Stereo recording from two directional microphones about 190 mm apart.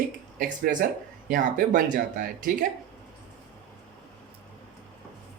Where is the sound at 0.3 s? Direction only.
45° right (ahead or behind).